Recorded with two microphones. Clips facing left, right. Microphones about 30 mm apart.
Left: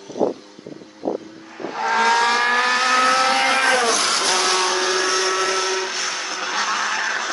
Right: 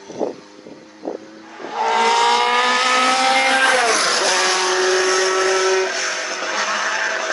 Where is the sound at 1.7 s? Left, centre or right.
Right.